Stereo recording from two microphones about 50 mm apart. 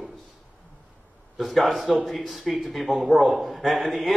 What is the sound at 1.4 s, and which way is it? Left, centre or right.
A man's voice, centre.